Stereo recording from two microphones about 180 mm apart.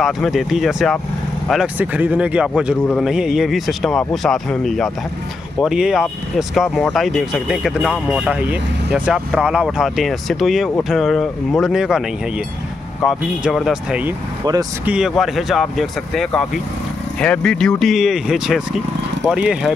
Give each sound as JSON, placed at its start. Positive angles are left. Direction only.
{"t": 0.0, "sound": "speech", "side_deg": 0}
{"t": 13.0, "sound": "speech", "side_deg": 0}
{"t": 14.4, "sound": "speech", "side_deg": -20}
{"t": 14.9, "sound": "speech", "side_deg": -5}